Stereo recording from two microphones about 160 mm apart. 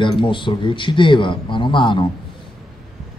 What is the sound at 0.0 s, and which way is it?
A man's voice, 30° left (ahead or behind).